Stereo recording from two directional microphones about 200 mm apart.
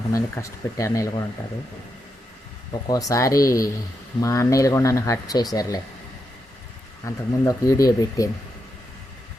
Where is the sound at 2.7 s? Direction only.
20° left (ahead or behind).